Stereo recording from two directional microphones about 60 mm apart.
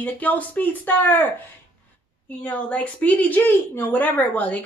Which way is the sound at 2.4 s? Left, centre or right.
Left.